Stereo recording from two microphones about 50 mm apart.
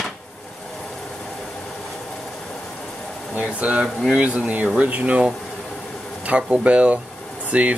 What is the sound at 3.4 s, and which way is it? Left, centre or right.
Speech, right.